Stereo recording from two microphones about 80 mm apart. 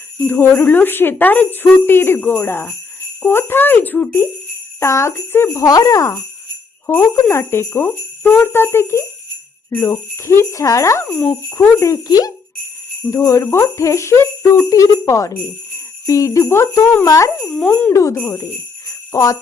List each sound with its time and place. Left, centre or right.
0.3 s speech: left
4.8 s jingle bell: left
5.6 s jingle bell: left
6.8 s speech: left
9.6 s jingle bell: left
11.1 s jingle bell: centre
11.8 s jingle bell: left
17.4 s speech: centre
17.7 s speech: centre
17.9 s jingle bell: left
19.1 s jingle bell: left